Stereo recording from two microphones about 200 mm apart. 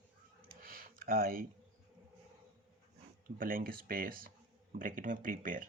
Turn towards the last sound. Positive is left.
turn(degrees=-45)  # may be behind; listen again after turning